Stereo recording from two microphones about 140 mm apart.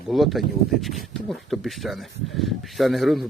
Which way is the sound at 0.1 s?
Centre (ahead or behind).